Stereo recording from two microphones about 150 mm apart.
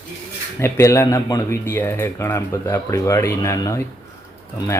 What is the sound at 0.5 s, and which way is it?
A man's voice, 15° left (ahead or behind).